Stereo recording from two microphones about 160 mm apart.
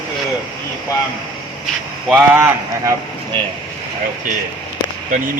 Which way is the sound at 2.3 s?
15° right (ahead or behind).